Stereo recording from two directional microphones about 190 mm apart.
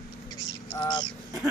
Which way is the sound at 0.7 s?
20° left (ahead or behind).